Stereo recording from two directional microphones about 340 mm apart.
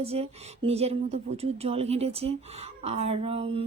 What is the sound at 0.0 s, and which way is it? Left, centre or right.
Speech, centre.